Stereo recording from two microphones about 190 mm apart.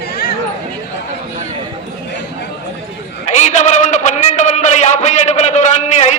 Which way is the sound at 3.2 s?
40° left (ahead or behind).